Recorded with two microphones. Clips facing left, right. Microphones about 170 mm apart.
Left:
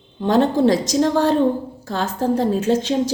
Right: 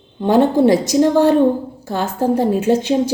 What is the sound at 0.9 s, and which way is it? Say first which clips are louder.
Speech: right 4 dB; 15° right (ahead or behind).